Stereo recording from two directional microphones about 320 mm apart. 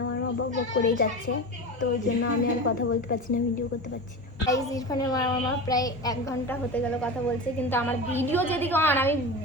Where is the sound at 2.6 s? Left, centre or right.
Left.